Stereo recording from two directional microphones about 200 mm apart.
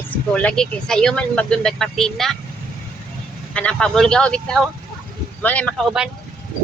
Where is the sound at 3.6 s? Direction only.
5° left (ahead or behind).